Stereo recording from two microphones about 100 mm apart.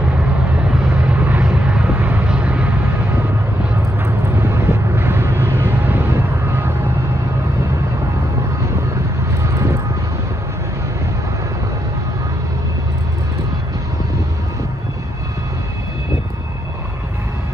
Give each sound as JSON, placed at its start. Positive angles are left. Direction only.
{"t": 0.7, "sound": "vehicle", "side_deg": -15}
{"t": 4.4, "sound": "vehicle", "side_deg": -25}
{"t": 9.4, "sound": "vehicle", "side_deg": -30}